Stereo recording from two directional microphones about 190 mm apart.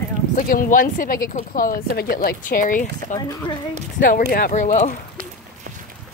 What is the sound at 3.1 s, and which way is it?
Speech, 20° left (ahead or behind).